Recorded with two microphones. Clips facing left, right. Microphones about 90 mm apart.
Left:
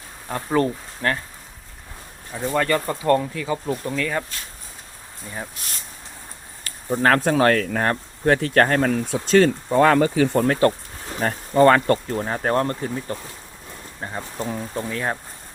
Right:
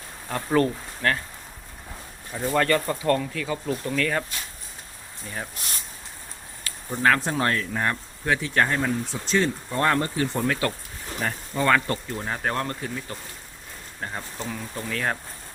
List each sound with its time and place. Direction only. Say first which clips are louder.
0.3 s speech: left 1 dB; 15° left (ahead or behind)
2.3 s speech: left 1 dB; 15° left (ahead or behind)
6.9 s speech: left 3 dB; 45° left (ahead or behind)
7.3 s speech: left 7 dB; 90° left
7.7 s speech: left 4 dB; 55° left (ahead or behind)
8.9 s speech: left 7 dB; 70° left (ahead or behind)
10.4 s speech: left 7 dB; 40° left (ahead or behind)
14.0 s speech: left 1 dB; 20° left (ahead or behind)
14.3 s speech: left 6 dB; 40° left (ahead or behind)
14.8 s speech: even; 25° left (ahead or behind)